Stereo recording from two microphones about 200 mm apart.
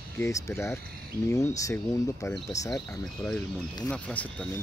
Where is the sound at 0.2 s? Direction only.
15° left (ahead or behind).